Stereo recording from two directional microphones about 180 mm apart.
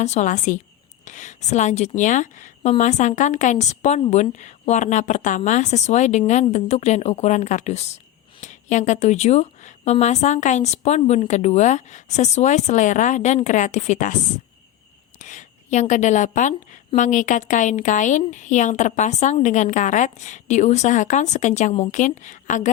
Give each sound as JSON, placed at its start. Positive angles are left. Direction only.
{"t": 0.0, "sound": "a woman's voice", "side_deg": 40}